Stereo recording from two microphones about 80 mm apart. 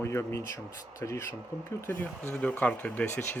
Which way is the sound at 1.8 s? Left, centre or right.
Left.